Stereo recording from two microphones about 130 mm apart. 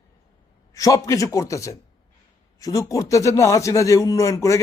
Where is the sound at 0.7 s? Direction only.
25° left (ahead or behind).